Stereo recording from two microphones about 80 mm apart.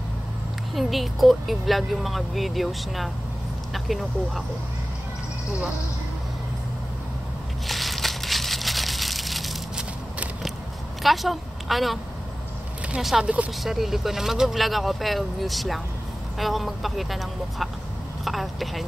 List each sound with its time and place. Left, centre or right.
0.7 s speech: centre
7.6 s crumpling: centre
11.0 s a woman's voice: centre
13.2 s speech: centre
13.7 s a woman's voice: centre